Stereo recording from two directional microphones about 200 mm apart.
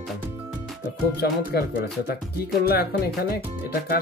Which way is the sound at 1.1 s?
55° left (ahead or behind).